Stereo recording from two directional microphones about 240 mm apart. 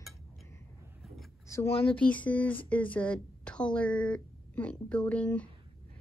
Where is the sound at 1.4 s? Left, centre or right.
Centre.